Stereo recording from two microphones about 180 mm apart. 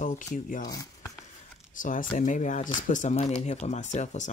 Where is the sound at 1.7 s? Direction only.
45° left (ahead or behind).